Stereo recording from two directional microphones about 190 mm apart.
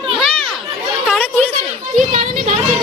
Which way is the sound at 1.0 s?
5° left (ahead or behind).